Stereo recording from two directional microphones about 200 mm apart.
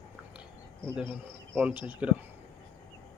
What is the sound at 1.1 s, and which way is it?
Speech, 5° right (ahead or behind).